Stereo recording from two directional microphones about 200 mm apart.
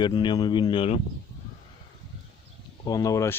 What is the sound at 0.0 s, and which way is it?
Speech, 20° left (ahead or behind).